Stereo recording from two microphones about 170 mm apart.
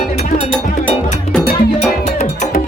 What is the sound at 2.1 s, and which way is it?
Music, 45° left (ahead or behind).